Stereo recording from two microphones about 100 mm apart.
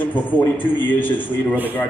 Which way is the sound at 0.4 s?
20° left (ahead or behind).